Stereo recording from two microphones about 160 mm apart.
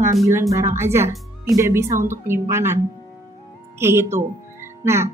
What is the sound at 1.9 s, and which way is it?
Speech, 55° right (ahead or behind).